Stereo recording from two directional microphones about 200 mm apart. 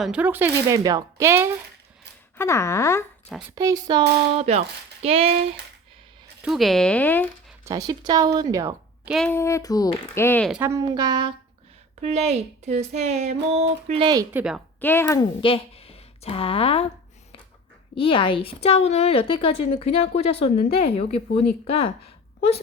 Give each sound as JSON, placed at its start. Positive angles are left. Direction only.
{"t": 0.0, "sound": "speech", "side_deg": -5}
{"t": 2.4, "sound": "speech", "side_deg": 15}
{"t": 3.5, "sound": "a woman's voice", "side_deg": -20}
{"t": 4.4, "sound": "a woman's voice", "side_deg": -30}
{"t": 6.4, "sound": "speech", "side_deg": 0}
{"t": 7.6, "sound": "speech", "side_deg": -15}
{"t": 9.0, "sound": "speech", "side_deg": 0}
{"t": 9.3, "sound": "speech", "side_deg": 15}
{"t": 10.5, "sound": "a woman's voice", "side_deg": -15}
{"t": 11.9, "sound": "a woman's voice", "side_deg": -35}
{"t": 14.3, "sound": "speech", "side_deg": -5}
{"t": 14.8, "sound": "speech", "side_deg": 10}
{"t": 15.4, "sound": "a woman's voice", "side_deg": 25}
{"t": 17.9, "sound": "a woman's voice", "side_deg": 25}